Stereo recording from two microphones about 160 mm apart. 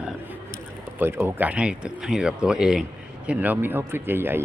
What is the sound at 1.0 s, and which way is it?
Speech, 15° right (ahead or behind).